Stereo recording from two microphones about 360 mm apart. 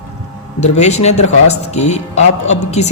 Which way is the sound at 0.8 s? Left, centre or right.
Centre.